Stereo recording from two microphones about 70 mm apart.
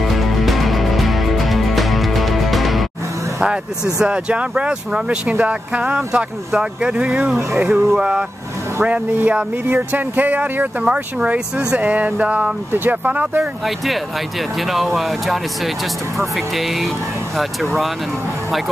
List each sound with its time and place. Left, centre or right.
0.0 s music: centre
4.0 s speech: centre
13.7 s speech: centre